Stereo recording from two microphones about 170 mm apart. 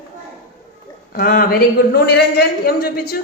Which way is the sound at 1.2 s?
55° left (ahead or behind).